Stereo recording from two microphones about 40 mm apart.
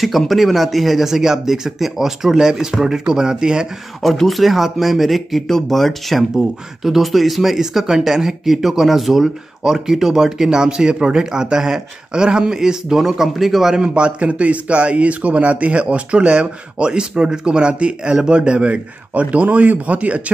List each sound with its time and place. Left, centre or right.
0.0 s speech: centre; by 3.6 s right
4.0 s speech: centre
6.3 s speech: centre
13.7 s a man's voice: right